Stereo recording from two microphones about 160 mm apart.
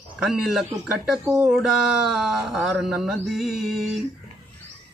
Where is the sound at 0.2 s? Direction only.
Centre (ahead or behind).